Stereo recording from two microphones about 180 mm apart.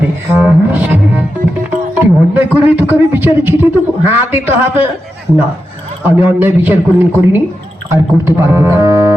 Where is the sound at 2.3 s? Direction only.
10° right (ahead or behind).